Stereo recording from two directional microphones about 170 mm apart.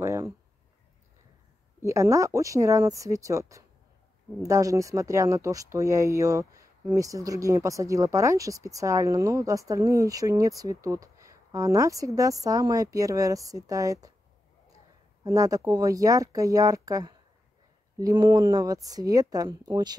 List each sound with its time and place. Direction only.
0.0 s speech: 15° right (ahead or behind)
1.8 s speech: 15° right (ahead or behind)
15.2 s speech: 20° right (ahead or behind)